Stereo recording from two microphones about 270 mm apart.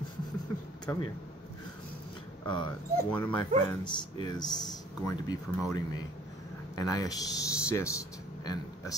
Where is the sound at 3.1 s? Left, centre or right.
Centre.